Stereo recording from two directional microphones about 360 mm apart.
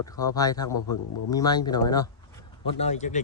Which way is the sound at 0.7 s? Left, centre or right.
Left.